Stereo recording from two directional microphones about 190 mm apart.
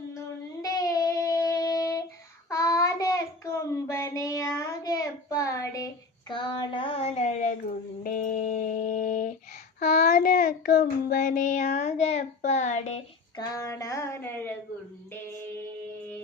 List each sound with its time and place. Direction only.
0.6 s a sound: 20° left (ahead or behind)
2.5 s child singing: 15° left (ahead or behind); by 7.5 s 40° left (ahead or behind)
8.0 s music: 45° left (ahead or behind)
10.1 s child singing: 50° left (ahead or behind)
13.3 s child singing: 15° left (ahead or behind)